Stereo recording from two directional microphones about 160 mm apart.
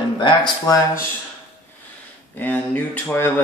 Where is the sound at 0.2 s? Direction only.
25° left (ahead or behind).